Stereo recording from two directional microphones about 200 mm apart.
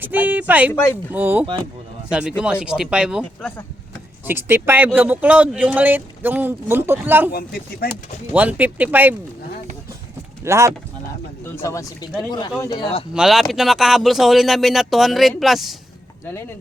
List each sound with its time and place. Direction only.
0.0 s speech: 10° right (ahead or behind)
4.3 s speech: 10° right (ahead or behind)
7.3 s speech: 50° left (ahead or behind)
8.3 s speech: 5° right (ahead or behind)
10.4 s speech: 15° right (ahead or behind)
11.5 s speech: 15° left (ahead or behind)
13.1 s speech: centre (ahead or behind)